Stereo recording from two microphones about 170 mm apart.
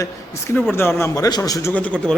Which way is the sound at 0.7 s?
15° left (ahead or behind).